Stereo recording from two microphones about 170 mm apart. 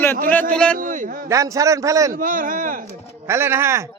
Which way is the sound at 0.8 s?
50° right (ahead or behind).